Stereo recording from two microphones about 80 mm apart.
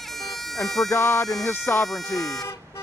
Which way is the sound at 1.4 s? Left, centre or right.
Left.